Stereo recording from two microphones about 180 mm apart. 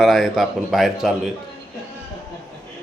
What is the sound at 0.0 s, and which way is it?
Speech, centre (ahead or behind).